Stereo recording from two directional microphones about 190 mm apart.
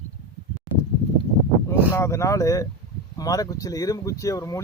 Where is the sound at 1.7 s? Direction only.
15° left (ahead or behind).